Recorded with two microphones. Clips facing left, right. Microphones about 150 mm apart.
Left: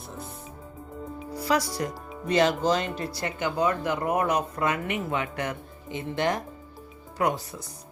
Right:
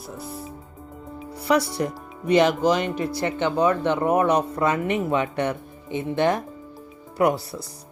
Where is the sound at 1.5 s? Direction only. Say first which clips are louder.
Right 5 dB; 25° right (ahead or behind).